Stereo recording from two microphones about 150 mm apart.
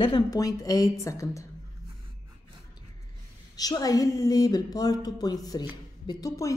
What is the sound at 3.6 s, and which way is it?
A woman's voice, 25° left (ahead or behind).